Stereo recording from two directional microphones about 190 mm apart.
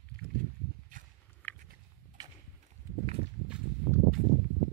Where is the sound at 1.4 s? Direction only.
10° left (ahead or behind).